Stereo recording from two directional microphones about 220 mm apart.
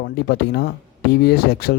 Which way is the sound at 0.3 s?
50° left (ahead or behind).